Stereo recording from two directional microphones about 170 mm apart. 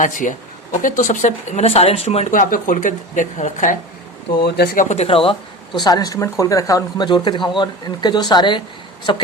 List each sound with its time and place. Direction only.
0.0 s speech: 50° left (ahead or behind)
4.4 s speech: 75° left (ahead or behind)
4.9 s speech: 35° left (ahead or behind)
5.8 s speech: 20° left (ahead or behind)